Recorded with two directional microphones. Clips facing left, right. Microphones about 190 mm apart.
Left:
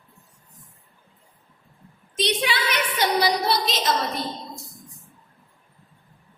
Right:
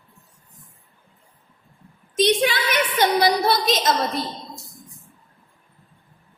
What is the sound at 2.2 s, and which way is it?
A woman's voice, 45° right (ahead or behind).